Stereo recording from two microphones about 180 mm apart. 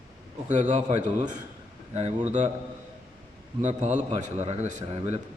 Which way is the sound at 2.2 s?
40° right (ahead or behind).